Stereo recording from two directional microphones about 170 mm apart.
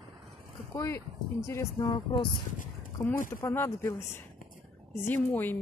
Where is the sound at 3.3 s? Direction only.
15° left (ahead or behind).